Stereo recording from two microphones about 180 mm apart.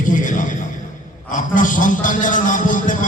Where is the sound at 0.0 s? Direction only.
45° left (ahead or behind).